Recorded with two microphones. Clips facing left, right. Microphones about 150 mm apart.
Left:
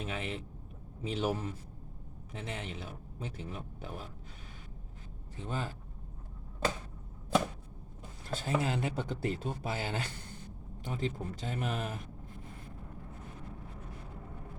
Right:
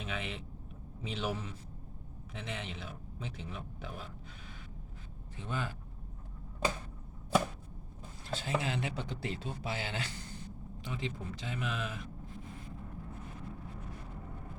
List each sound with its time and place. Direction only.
0.0 s speech: 40° left (ahead or behind)
5.4 s speech: 35° left (ahead or behind)
8.3 s speech: 45° left (ahead or behind)